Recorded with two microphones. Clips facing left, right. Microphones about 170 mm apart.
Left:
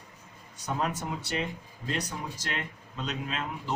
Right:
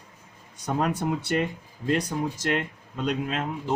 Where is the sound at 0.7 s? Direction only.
60° right (ahead or behind).